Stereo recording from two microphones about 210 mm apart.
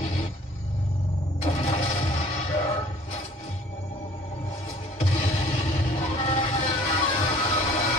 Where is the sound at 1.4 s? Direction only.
30° left (ahead or behind).